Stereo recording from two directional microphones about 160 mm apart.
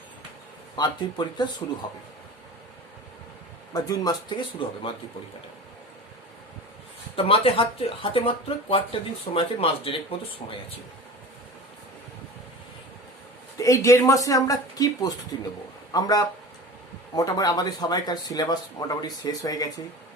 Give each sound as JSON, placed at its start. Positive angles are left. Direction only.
{"t": 0.8, "sound": "speech", "side_deg": 25}
{"t": 3.7, "sound": "speech", "side_deg": 25}
{"t": 7.2, "sound": "speech", "side_deg": 35}
{"t": 13.6, "sound": "speech", "side_deg": 20}